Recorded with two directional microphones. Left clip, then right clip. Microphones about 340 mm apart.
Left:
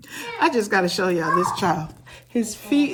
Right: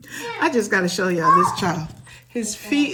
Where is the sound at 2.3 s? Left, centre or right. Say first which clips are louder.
Left 1 dB; left.